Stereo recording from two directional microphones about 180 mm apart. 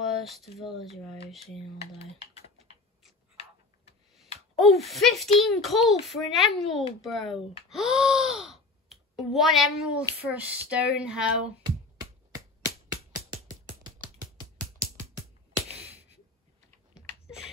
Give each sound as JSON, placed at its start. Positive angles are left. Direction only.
{"t": 0.0, "sound": "a child's voice", "side_deg": 0}
{"t": 1.8, "sound": "speech", "side_deg": 35}
{"t": 4.6, "sound": "a child's voice", "side_deg": 0}
{"t": 12.6, "sound": "music", "side_deg": -20}
{"t": 16.9, "sound": "typing", "side_deg": -5}